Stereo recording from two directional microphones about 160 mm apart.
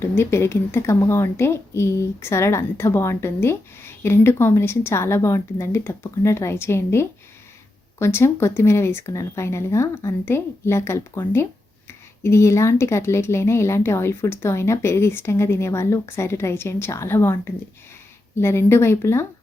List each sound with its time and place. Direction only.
0.0 s a woman's voice: 15° left (ahead or behind)